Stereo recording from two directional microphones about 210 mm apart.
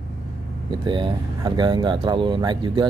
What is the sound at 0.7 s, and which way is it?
Speech, 25° right (ahead or behind).